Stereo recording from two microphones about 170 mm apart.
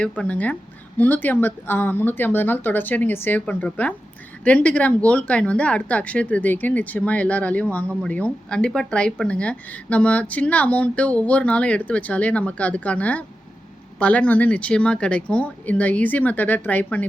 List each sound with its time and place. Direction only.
0.2 s speech: 10° left (ahead or behind)